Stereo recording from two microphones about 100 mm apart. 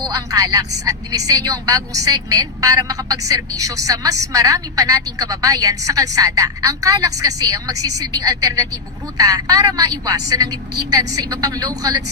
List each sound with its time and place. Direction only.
0.1 s speech: 35° right (ahead or behind)